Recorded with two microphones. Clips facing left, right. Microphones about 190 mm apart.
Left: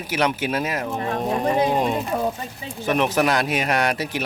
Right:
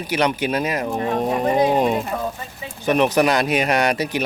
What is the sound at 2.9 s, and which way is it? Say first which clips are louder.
Speech: right 3 dB; centre (ahead or behind).